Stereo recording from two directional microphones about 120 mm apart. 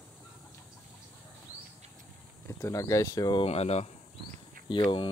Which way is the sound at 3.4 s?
60° left (ahead or behind).